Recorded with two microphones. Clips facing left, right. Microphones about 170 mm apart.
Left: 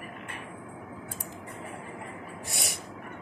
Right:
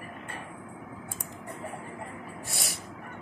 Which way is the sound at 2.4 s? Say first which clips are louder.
Left 3 dB; 20° left (ahead or behind).